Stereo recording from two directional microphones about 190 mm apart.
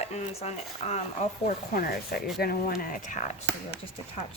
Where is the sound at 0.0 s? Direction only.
35° left (ahead or behind).